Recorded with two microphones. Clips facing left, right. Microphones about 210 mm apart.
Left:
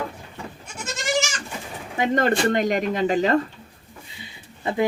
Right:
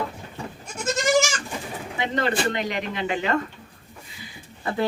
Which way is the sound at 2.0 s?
50° left (ahead or behind).